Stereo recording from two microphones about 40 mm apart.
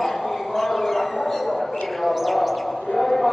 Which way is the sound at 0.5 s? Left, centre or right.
Centre.